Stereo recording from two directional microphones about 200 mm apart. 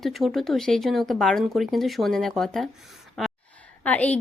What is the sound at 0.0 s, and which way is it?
Speech, centre (ahead or behind).